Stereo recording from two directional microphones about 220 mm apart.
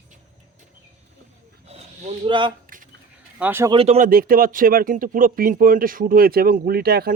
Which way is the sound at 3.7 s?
25° right (ahead or behind).